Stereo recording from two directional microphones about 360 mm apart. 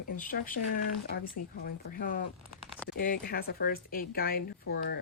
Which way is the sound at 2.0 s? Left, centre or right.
Left.